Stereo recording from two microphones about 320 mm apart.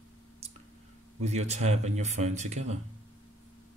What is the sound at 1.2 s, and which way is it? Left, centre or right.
Speech, right.